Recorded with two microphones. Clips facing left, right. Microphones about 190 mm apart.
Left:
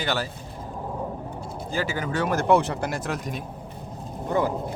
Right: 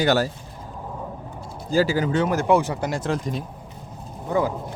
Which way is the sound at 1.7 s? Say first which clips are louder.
Right 7 dB; 35° right (ahead or behind).